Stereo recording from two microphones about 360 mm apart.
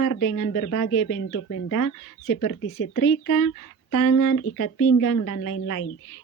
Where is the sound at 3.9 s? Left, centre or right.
Left.